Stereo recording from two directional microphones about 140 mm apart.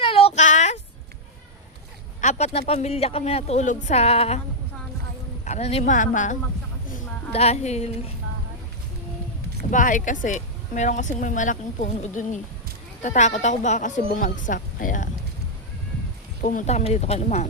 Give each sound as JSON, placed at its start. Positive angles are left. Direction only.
{"t": 0.0, "sound": "child singing", "side_deg": 40}
{"t": 0.3, "sound": "child singing", "side_deg": 60}
{"t": 2.2, "sound": "speech", "side_deg": 50}
{"t": 5.5, "sound": "speech", "side_deg": 50}
{"t": 7.3, "sound": "speech", "side_deg": 50}
{"t": 9.7, "sound": "speech", "side_deg": 70}
{"t": 16.4, "sound": "speech", "side_deg": 65}